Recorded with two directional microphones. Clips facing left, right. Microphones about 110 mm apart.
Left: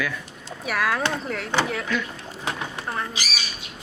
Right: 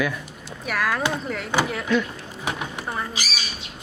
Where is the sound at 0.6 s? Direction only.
Centre (ahead or behind).